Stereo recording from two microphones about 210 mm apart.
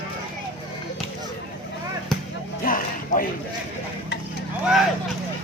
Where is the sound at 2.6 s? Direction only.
40° left (ahead or behind).